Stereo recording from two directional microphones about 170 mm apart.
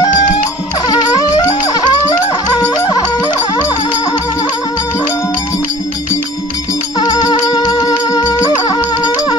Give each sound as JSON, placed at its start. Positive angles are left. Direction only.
{"t": 0.8, "sound": "music", "side_deg": 25}
{"t": 7.0, "sound": "music", "side_deg": 25}